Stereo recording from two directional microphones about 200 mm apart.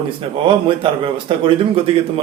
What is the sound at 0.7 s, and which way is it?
A man's voice, 25° right (ahead or behind).